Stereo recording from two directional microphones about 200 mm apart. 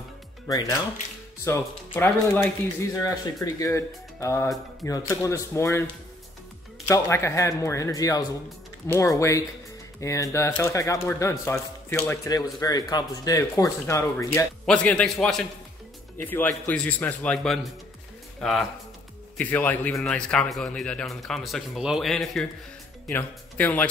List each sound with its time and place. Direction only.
0.5 s speech: 20° left (ahead or behind)
6.9 s a man's voice: 15° left (ahead or behind)